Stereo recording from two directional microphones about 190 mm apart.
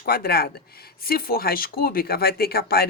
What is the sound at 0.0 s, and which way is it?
Speech, 55° left (ahead or behind).